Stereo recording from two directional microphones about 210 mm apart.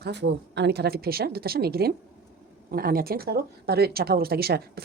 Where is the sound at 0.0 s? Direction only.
55° right (ahead or behind).